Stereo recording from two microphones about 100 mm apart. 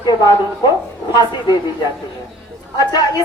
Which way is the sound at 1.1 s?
45° left (ahead or behind).